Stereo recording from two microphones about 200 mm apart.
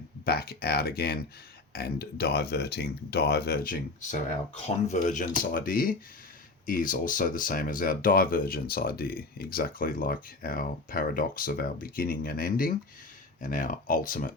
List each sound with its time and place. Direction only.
0.3 s speech: 50° left (ahead or behind)